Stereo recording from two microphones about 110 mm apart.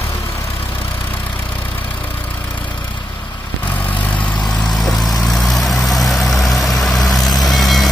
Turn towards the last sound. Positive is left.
turn(degrees=0)  # may be behind; listen again after turning